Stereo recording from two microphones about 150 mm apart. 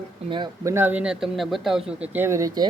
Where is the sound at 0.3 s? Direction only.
30° right (ahead or behind).